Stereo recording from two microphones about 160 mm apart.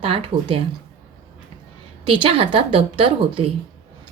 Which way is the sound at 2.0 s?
35° right (ahead or behind).